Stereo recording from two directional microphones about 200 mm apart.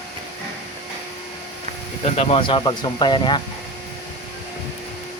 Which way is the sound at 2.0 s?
30° left (ahead or behind).